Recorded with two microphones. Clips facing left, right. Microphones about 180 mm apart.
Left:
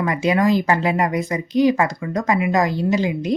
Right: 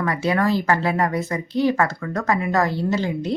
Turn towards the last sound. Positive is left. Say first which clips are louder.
# left 3 dB
turn(degrees=15)  # may be behind; listen again after turning